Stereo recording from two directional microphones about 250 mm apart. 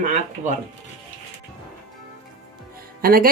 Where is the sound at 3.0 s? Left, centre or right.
Right.